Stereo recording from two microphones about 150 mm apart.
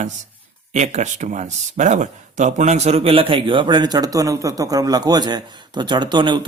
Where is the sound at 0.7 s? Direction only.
50° right (ahead or behind).